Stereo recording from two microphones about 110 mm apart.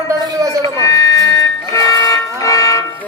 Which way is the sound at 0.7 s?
30° left (ahead or behind).